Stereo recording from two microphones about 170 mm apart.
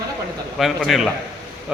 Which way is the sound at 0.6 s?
Centre (ahead or behind).